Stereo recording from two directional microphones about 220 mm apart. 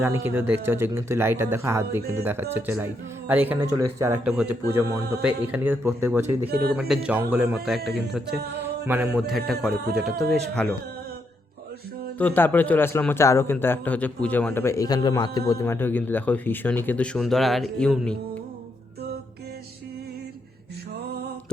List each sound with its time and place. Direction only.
0.0 s speech: 10° right (ahead or behind)
6.5 s speech: 45° right (ahead or behind)
6.7 s speech: 5° right (ahead or behind)
12.2 s a man's voice: 10° left (ahead or behind)